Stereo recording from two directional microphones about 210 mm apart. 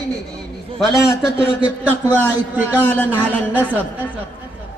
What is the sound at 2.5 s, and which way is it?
Speech, 10° right (ahead or behind).